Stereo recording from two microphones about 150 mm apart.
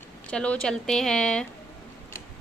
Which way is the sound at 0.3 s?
5° left (ahead or behind).